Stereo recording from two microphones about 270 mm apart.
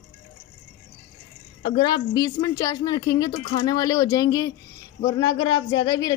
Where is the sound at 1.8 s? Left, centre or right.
Centre.